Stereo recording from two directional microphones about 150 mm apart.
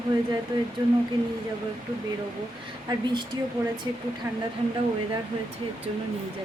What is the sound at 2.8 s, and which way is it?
Speech, 30° right (ahead or behind).